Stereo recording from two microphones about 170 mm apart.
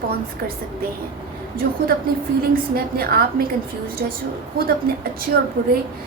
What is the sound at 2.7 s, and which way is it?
A woman's voice, 60° right (ahead or behind).